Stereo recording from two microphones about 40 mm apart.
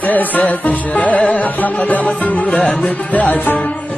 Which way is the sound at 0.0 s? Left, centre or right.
Left.